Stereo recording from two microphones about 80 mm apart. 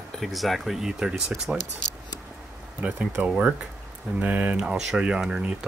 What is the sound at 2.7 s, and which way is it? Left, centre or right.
Speech, centre.